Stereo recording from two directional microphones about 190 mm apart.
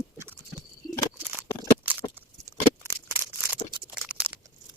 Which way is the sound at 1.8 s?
10° right (ahead or behind).